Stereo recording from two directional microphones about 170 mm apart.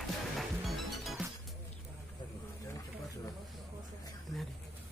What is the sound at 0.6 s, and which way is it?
Music, centre (ahead or behind).